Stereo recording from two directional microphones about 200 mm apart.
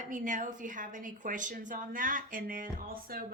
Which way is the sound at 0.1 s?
40° right (ahead or behind).